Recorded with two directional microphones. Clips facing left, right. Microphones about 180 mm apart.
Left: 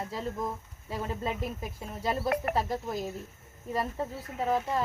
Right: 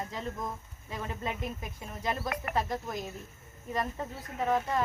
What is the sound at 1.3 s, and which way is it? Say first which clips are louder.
Speech: left 1 dB; 5° left (ahead or behind).